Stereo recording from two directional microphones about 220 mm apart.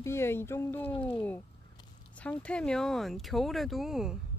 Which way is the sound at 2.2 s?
5° left (ahead or behind).